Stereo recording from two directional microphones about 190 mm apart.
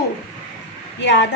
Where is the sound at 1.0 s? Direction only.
70° left (ahead or behind).